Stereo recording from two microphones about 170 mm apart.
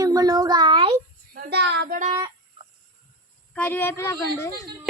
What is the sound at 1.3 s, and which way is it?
Speech, 70° right (ahead or behind).